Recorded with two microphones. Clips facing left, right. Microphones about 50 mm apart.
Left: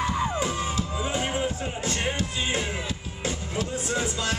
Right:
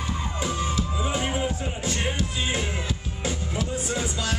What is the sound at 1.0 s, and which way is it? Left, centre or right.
Music, centre.